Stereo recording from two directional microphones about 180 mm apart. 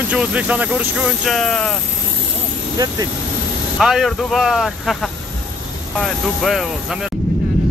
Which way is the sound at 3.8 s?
Centre (ahead or behind).